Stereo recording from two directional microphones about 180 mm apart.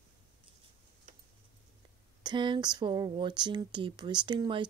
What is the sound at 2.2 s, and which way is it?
Speech, 25° right (ahead or behind).